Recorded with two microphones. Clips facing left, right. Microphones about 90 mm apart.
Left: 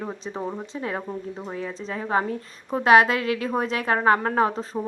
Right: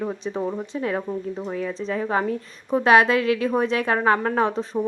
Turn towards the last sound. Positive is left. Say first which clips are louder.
# right 1 dB
turn(degrees=35)  # may be behind; listen again after turning